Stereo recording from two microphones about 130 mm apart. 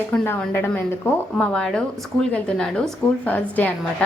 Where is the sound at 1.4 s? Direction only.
5° left (ahead or behind).